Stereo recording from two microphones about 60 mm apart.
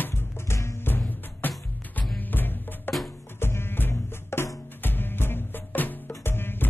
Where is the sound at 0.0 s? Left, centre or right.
Left.